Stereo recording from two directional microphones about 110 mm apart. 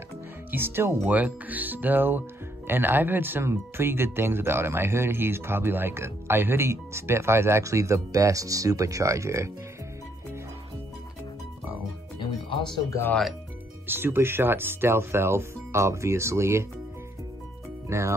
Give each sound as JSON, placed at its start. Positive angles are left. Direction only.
{"t": 0.5, "sound": "speech", "side_deg": -20}
{"t": 12.2, "sound": "music", "side_deg": 50}
{"t": 13.8, "sound": "speech", "side_deg": -20}
{"t": 17.8, "sound": "speech", "side_deg": -25}